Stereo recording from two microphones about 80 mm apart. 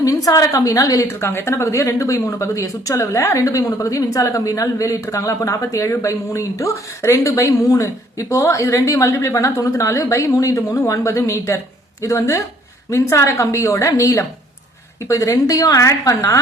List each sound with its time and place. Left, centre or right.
0.0 s a woman's voice: left
1.0 s a woman's voice: left